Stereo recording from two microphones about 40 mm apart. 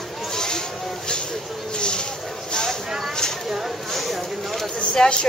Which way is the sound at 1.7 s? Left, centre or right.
Left.